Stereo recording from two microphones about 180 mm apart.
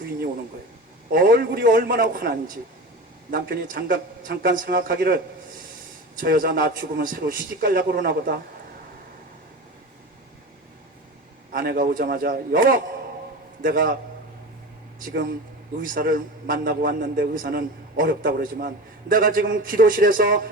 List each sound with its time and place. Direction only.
1.1 s a man's voice: 55° right (ahead or behind)
11.5 s a man's voice: 55° right (ahead or behind)
15.8 s a man's voice: 50° right (ahead or behind)